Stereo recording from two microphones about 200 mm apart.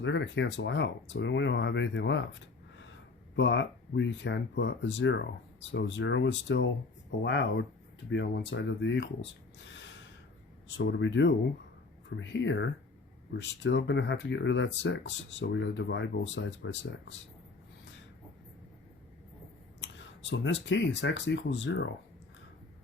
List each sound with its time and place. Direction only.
0.0 s speech: 65° left (ahead or behind)
3.3 s speech: 65° left (ahead or behind)
19.8 s speech: 65° left (ahead or behind)